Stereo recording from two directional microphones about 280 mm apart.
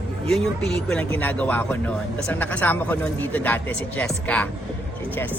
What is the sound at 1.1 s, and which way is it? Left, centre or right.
Speech, centre.